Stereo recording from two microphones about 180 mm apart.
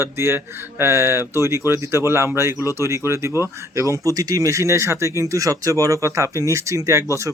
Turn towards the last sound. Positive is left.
turn(degrees=-15)  # may be behind; listen again after turning